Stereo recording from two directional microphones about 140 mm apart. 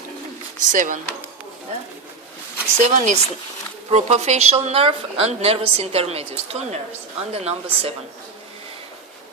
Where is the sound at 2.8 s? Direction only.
60° right (ahead or behind); by 7.9 s 45° right (ahead or behind).